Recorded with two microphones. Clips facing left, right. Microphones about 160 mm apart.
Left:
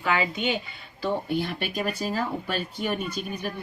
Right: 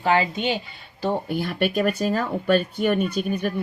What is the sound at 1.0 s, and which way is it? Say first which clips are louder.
A woman's voice: right 2 dB; 50° right (ahead or behind).